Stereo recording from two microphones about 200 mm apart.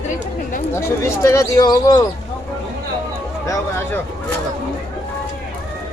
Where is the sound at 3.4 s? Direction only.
15° left (ahead or behind).